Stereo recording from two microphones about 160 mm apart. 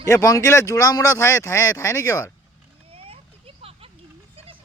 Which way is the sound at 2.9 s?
35° right (ahead or behind).